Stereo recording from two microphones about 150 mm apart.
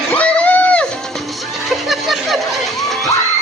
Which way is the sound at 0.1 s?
10° left (ahead or behind).